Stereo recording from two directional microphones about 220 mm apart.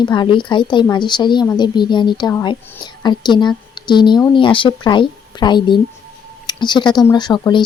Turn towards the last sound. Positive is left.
turn(degrees=20)  # may be behind; listen again after turning